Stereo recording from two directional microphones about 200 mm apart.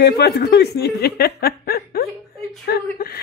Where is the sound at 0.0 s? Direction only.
55° left (ahead or behind).